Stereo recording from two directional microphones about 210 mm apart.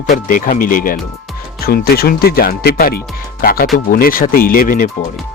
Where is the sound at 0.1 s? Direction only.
40° left (ahead or behind).